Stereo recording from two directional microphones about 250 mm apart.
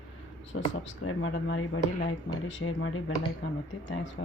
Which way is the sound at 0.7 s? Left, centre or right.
Left.